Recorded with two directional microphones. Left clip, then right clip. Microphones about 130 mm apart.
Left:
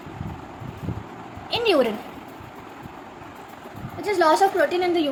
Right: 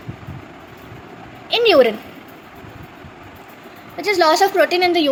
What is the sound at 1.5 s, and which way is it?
Speech, 20° right (ahead or behind).